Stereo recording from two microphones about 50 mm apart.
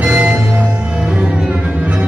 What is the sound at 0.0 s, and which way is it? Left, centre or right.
Music, right.